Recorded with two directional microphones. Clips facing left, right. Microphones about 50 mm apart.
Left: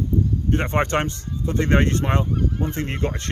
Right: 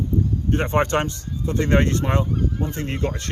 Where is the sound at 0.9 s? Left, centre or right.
Left.